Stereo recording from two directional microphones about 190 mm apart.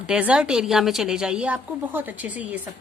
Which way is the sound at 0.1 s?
5° right (ahead or behind).